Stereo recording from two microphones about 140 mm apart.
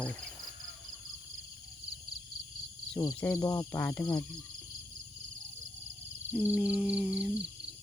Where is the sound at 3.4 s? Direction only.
25° left (ahead or behind).